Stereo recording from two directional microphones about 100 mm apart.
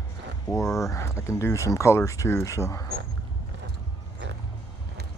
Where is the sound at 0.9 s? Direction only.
30° left (ahead or behind).